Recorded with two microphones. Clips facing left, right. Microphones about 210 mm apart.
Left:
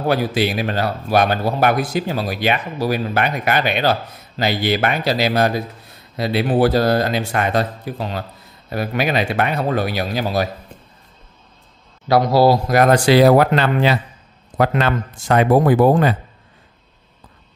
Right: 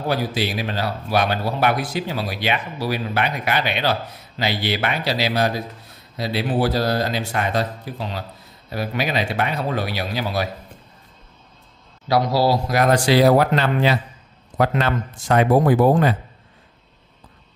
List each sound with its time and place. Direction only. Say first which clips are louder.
0.1 s speech: left 4 dB; 60° left (ahead or behind)
12.1 s speech: left 5 dB; 50° left (ahead or behind); by 16.1 s 85° left